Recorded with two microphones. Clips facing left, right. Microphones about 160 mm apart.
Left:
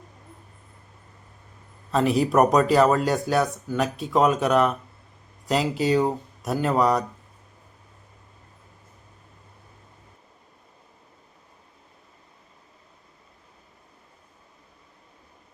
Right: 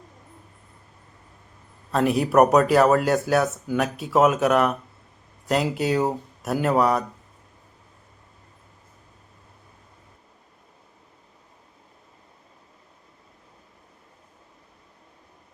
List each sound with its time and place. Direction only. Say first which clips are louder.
1.9 s speech: even; centre (ahead or behind)